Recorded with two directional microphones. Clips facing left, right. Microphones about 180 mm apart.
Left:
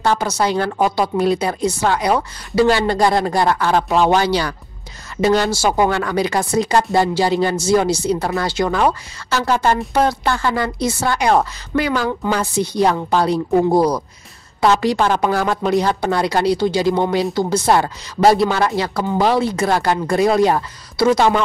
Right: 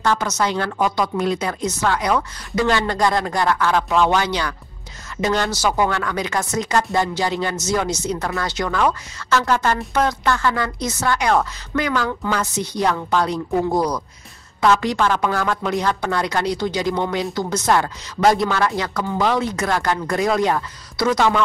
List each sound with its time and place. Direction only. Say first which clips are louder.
0.0 s speech: left 3 dB; 30° left (ahead or behind)